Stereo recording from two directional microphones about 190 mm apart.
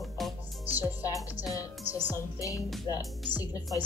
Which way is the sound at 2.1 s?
15° left (ahead or behind).